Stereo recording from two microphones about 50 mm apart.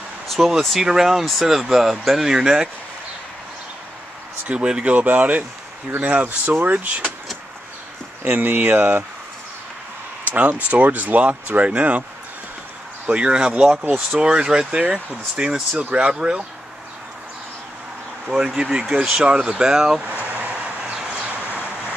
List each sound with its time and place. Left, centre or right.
0.3 s speech: centre
4.5 s speech: centre
4.9 s speech: right
6.2 s speech: right
8.3 s speech: right
10.2 s speech: right
13.1 s speech: centre
18.6 s speech: centre
20.1 s a sound: right
20.4 s vehicle: right